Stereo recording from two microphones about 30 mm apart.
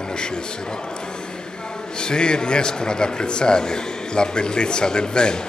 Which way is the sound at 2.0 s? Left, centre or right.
Left.